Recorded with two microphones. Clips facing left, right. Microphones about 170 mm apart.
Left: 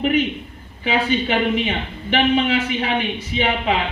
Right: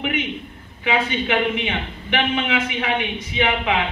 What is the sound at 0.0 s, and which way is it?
A woman's voice, 35° left (ahead or behind).